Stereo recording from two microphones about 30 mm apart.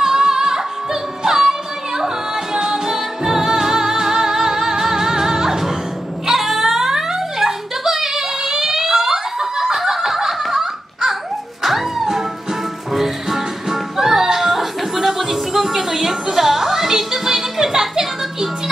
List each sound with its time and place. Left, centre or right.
0.0 s music: centre
6.2 s a sound: centre
11.6 s music: centre